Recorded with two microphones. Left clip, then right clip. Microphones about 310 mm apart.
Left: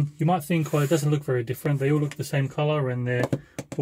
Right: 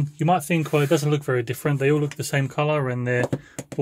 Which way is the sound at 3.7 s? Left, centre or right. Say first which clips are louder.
Right 3 dB; centre.